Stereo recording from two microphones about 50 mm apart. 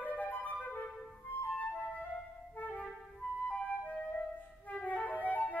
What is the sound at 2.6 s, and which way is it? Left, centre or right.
Clarinet, left.